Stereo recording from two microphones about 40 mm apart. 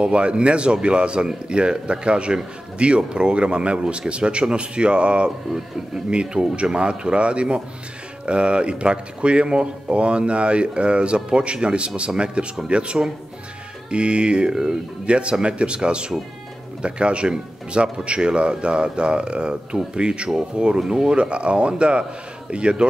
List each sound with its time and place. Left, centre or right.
0.0 s speech: right
15.0 s speech: right